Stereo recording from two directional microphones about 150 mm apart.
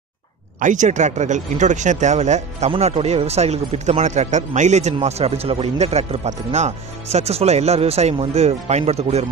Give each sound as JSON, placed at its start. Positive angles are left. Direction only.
{"t": 0.6, "sound": "speech", "side_deg": -55}